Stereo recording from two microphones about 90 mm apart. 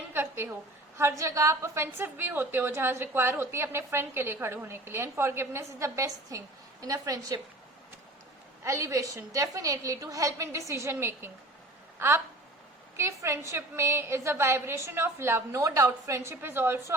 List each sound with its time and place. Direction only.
0.1 s a sound: 25° right (ahead or behind)
0.9 s a woman's voice: 30° right (ahead or behind)
8.6 s a woman's voice: 35° right (ahead or behind)
11.9 s a woman's voice: 25° right (ahead or behind)